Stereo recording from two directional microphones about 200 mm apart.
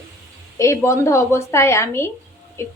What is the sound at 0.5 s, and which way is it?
A woman's voice, 15° left (ahead or behind).